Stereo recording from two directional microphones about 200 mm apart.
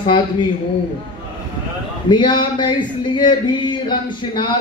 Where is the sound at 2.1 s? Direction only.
25° left (ahead or behind).